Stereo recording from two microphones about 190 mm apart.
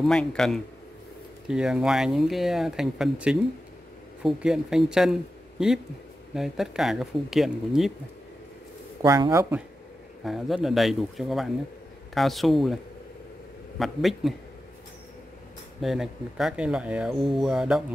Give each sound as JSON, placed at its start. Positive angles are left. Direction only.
{"t": 0.0, "sound": "speech", "side_deg": 5}
{"t": 9.0, "sound": "speech", "side_deg": -20}
{"t": 10.2, "sound": "speech", "side_deg": 0}
{"t": 13.7, "sound": "speech", "side_deg": 0}
{"t": 15.8, "sound": "speech", "side_deg": 0}